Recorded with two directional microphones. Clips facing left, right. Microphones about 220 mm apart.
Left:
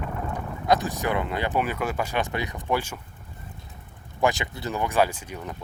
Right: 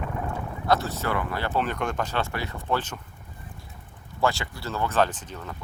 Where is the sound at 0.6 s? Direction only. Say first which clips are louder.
Left 2 dB; 15° left (ahead or behind).